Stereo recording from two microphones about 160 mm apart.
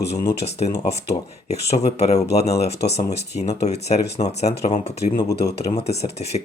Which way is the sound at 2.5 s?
90° left.